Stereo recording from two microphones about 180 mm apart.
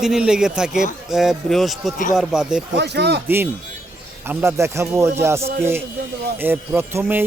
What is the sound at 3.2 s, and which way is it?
A man's voice, 10° right (ahead or behind).